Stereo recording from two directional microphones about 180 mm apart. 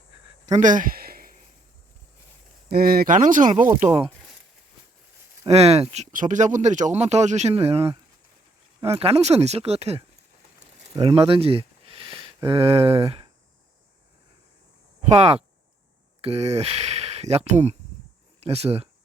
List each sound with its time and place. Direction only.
0.4 s a sound: 40° right (ahead or behind)
2.6 s speech: 55° right (ahead or behind)
5.5 s speech: 35° right (ahead or behind)
9.0 s speech: 35° right (ahead or behind)
10.8 s a sound: 30° right (ahead or behind)
12.5 s speech: 35° right (ahead or behind)
15.1 s speech: 35° right (ahead or behind)